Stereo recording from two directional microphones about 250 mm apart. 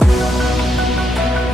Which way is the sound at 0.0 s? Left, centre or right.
Centre.